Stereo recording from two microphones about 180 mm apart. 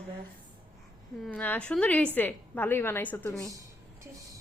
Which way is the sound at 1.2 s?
10° left (ahead or behind).